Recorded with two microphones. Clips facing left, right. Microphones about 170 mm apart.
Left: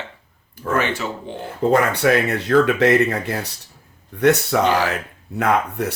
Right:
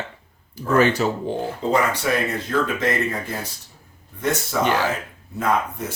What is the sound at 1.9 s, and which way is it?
Speech, 65° left (ahead or behind).